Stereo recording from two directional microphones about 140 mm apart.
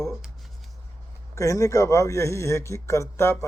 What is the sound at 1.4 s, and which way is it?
A man's voice, 20° left (ahead or behind).